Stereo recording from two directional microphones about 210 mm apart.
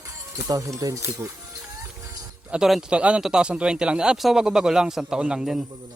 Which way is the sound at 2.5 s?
Centre (ahead or behind).